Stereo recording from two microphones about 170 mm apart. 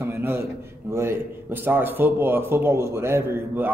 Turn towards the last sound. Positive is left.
turn(degrees=-15)  # may be behind; listen again after turning